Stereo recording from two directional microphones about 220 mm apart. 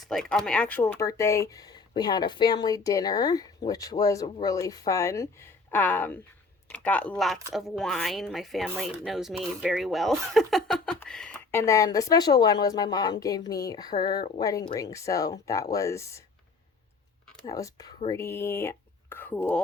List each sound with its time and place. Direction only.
0.0 s speech: centre (ahead or behind)
17.4 s speech: 15° left (ahead or behind)